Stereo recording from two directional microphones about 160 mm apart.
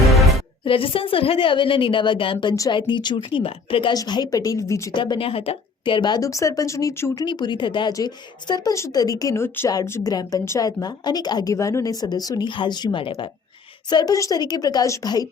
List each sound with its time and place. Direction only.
0.0 s music: centre (ahead or behind)
0.6 s a woman's voice: 35° left (ahead or behind); by 4.9 s 20° left (ahead or behind)
4.9 s speech: 30° left (ahead or behind)